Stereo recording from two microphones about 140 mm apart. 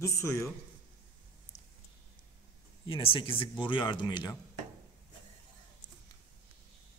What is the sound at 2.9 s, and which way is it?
A man's voice, 40° left (ahead or behind).